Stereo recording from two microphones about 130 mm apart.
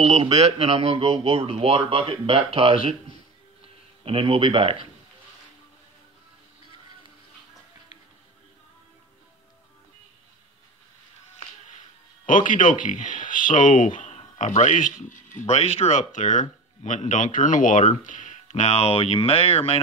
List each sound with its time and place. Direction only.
0.0 s speech: 55° right (ahead or behind)
4.0 s speech: 45° right (ahead or behind)
12.3 s speech: 90° left
15.4 s speech: 55° left (ahead or behind)